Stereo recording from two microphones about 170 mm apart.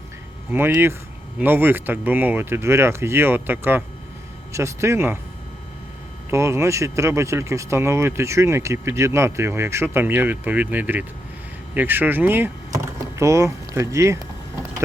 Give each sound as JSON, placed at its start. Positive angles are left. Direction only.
{"t": 0.5, "sound": "speech", "side_deg": -15}
{"t": 6.3, "sound": "speech", "side_deg": -15}